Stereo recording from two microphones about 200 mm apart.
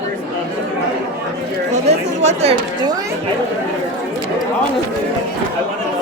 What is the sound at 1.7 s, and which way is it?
Chatter, 35° right (ahead or behind).